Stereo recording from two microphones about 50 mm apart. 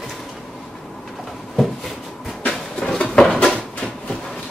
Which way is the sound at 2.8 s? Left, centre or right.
Centre.